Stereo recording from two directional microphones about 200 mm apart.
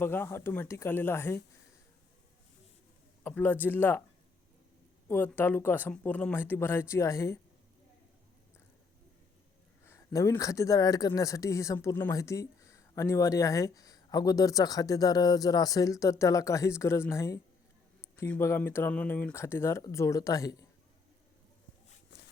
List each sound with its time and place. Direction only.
0.0 s speech: 10° left (ahead or behind)
3.2 s speech: 10° left (ahead or behind)
5.0 s speech: 10° left (ahead or behind)
9.8 s speech: 15° left (ahead or behind)